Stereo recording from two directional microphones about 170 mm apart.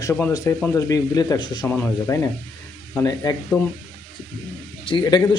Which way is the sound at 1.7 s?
10° left (ahead or behind).